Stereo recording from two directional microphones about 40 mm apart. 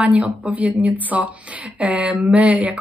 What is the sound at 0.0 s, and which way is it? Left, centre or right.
Speech, right.